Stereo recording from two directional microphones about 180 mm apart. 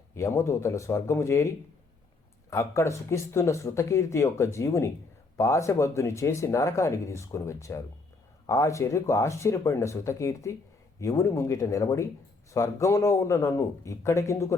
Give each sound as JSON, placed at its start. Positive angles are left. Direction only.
{"t": 0.1, "sound": "speech", "side_deg": 15}